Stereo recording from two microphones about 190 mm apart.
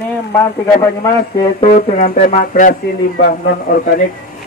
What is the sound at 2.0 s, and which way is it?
A man's voice, 40° left (ahead or behind).